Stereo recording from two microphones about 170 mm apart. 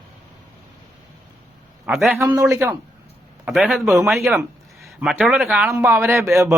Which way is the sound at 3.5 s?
5° right (ahead or behind).